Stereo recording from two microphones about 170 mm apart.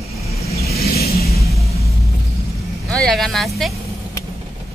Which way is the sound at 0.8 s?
65° left (ahead or behind).